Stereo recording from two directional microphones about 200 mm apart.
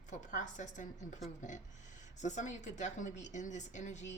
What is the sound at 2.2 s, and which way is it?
A woman's voice, 35° left (ahead or behind).